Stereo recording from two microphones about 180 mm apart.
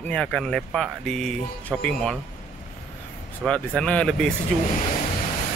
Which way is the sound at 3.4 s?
5° left (ahead or behind).